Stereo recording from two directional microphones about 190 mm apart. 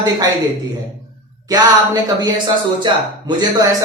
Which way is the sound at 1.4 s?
20° right (ahead or behind).